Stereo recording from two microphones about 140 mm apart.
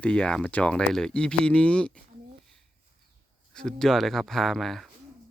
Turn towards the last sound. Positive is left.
turn(degrees=0)  # may be behind; listen again after turning